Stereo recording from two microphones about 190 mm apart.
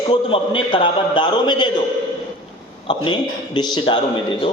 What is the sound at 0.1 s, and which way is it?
A man's voice, 25° left (ahead or behind).